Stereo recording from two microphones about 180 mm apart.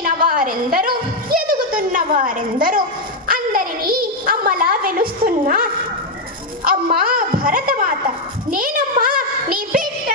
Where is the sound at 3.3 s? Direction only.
50° right (ahead or behind).